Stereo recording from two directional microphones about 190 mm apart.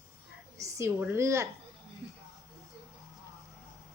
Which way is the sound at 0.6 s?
15° right (ahead or behind).